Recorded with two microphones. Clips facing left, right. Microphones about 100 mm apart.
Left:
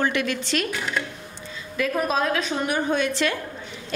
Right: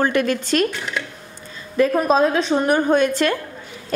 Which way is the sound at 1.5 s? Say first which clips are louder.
Right 7 dB; 35° right (ahead or behind).